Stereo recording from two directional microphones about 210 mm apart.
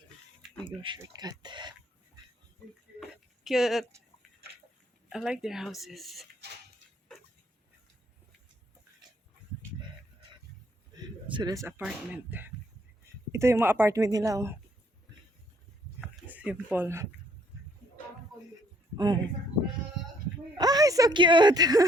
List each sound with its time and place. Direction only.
0.6 s a woman's voice: 25° right (ahead or behind)
3.4 s speech: centre (ahead or behind)
5.0 s speech: 5° right (ahead or behind)
10.9 s a sound: 20° right (ahead or behind)
11.8 s speech: 5° right (ahead or behind)
16.0 s a sound: 5° right (ahead or behind)
18.9 s a woman's voice: 20° right (ahead or behind)
20.6 s a woman's voice: 20° right (ahead or behind)